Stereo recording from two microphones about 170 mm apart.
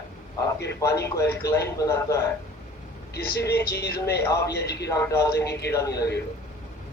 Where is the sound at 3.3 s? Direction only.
75° left (ahead or behind).